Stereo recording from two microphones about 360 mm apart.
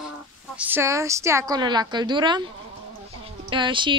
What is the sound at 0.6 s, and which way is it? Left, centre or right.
A woman's voice, centre.